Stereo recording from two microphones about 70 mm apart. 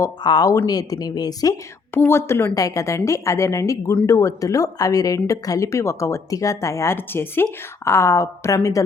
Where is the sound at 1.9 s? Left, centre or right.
Left.